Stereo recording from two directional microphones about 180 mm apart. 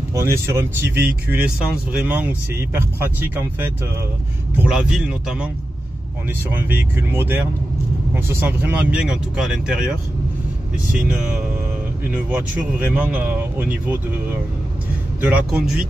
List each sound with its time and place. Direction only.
0.1 s speech: 15° right (ahead or behind)
6.5 s speech: 10° right (ahead or behind)
12.1 s speech: 10° right (ahead or behind)
15.2 s speech: 5° right (ahead or behind)